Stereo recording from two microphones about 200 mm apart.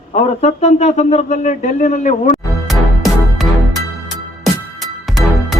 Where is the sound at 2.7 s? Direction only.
Centre (ahead or behind).